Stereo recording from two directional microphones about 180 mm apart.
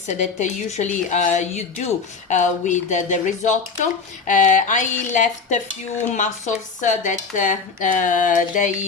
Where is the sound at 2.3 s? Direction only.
45° left (ahead or behind).